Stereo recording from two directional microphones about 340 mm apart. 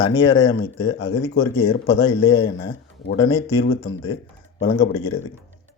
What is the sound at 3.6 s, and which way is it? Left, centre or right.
Speech, left.